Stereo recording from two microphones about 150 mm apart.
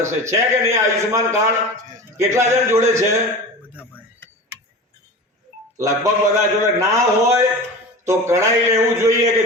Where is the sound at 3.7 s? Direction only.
15° left (ahead or behind).